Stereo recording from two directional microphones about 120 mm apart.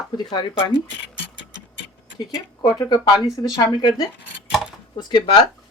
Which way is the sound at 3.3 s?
35° left (ahead or behind).